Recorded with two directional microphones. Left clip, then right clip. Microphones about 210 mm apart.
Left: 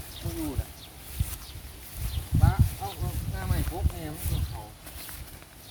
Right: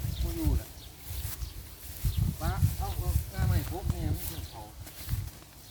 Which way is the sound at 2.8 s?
5° right (ahead or behind).